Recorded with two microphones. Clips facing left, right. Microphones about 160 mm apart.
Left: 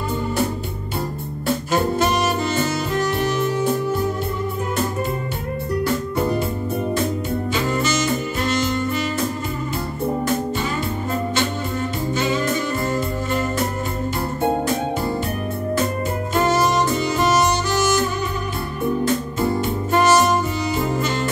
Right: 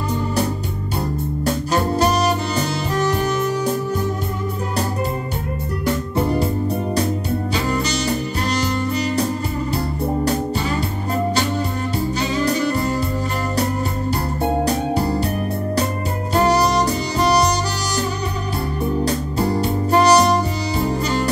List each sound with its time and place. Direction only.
1.7 s saxophone: 35° right (ahead or behind)
7.5 s music: 35° right (ahead or behind)
12.3 s music: 35° right (ahead or behind)
16.3 s saxophone: 35° right (ahead or behind)
19.0 s music: 40° right (ahead or behind)